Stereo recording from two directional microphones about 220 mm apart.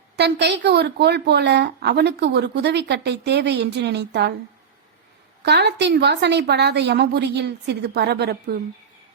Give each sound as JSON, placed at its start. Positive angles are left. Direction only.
{"t": 0.2, "sound": "a woman's voice", "side_deg": -50}
{"t": 5.4, "sound": "a woman's voice", "side_deg": -50}